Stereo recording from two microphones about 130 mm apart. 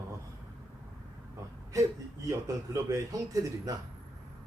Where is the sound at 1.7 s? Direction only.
25° right (ahead or behind).